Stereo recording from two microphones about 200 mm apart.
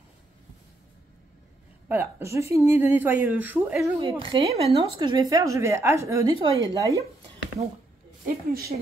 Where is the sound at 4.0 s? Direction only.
25° right (ahead or behind).